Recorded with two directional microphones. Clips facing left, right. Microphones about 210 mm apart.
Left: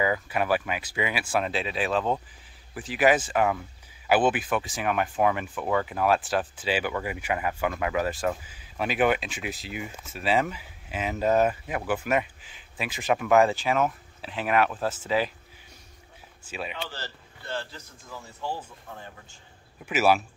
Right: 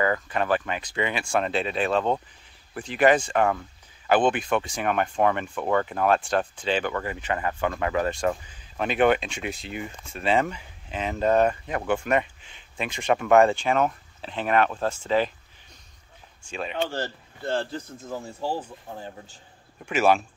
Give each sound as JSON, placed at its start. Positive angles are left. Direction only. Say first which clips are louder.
{"t": 0.0, "sound": "speech", "louder": "right 1 dB", "side_deg": 10}
{"t": 16.4, "sound": "speech", "louder": "right 3 dB", "side_deg": 5}
{"t": 16.7, "sound": "speech", "louder": "right 9 dB", "side_deg": -50}
{"t": 18.9, "sound": "a man's voice", "louder": "right 4 dB", "side_deg": -30}
{"t": 19.9, "sound": "speech", "louder": "right 1 dB", "side_deg": 5}